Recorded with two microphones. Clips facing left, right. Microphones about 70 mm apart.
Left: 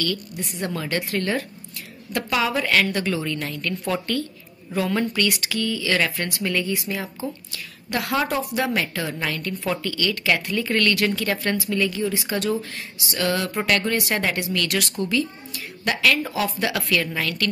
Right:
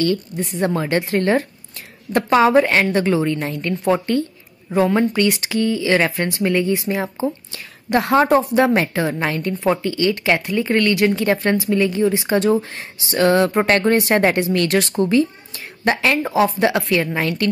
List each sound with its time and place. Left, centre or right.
0.0 s a woman's voice: right